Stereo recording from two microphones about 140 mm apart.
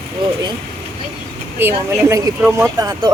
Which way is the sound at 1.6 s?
15° right (ahead or behind).